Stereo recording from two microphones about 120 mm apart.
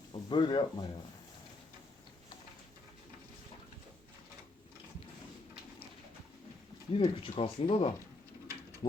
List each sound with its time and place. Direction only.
0.1 s speech: 45° left (ahead or behind)
6.9 s speech: 50° left (ahead or behind)
8.8 s a sound: 55° left (ahead or behind)